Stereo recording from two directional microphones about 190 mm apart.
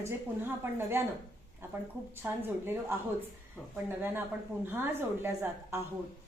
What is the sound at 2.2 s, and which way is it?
Speech, 10° right (ahead or behind).